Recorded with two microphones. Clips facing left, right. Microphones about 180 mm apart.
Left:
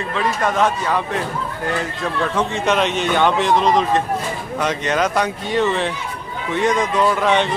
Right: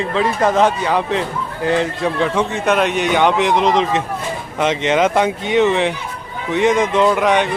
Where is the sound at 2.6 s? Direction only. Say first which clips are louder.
Right 2 dB; 10° right (ahead or behind).